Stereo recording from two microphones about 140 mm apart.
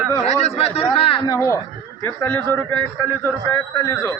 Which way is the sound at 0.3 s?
50° left (ahead or behind).